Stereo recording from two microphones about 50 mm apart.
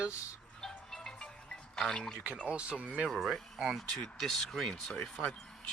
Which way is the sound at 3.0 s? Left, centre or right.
Centre.